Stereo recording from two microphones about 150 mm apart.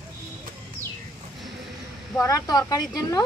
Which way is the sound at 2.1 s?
20° left (ahead or behind).